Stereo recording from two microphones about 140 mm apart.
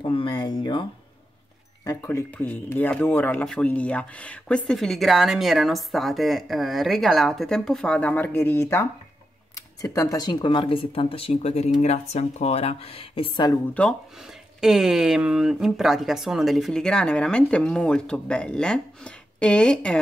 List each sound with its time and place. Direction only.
0.0 s speech: 35° left (ahead or behind)
1.9 s speech: 20° left (ahead or behind); by 13.5 s 40° left (ahead or behind)
13.8 s speech: 10° left (ahead or behind)
14.6 s speech: 5° right (ahead or behind)